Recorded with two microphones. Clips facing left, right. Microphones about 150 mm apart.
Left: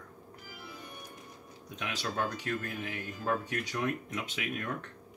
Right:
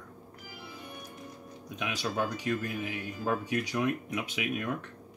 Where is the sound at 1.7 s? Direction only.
15° right (ahead or behind).